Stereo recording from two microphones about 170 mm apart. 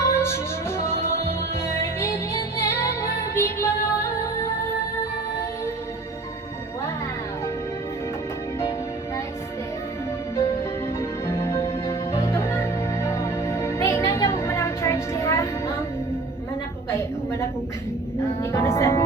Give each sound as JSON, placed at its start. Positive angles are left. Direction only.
{"t": 0.1, "sound": "music", "side_deg": 15}
{"t": 10.3, "sound": "music", "side_deg": 15}
{"t": 16.9, "sound": "a sound", "side_deg": 15}
{"t": 18.5, "sound": "music", "side_deg": 15}